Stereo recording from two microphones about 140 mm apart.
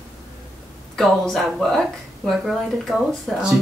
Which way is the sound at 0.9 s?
Centre (ahead or behind).